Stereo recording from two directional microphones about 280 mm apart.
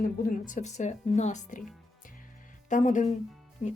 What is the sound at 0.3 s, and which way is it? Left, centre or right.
A woman's voice, left.